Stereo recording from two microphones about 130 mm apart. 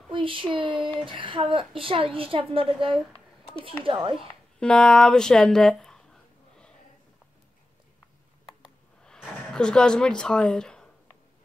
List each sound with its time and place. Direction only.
0.1 s a child's voice: 40° right (ahead or behind)
4.6 s speech: 5° left (ahead or behind)
9.0 s a sound: 5° left (ahead or behind)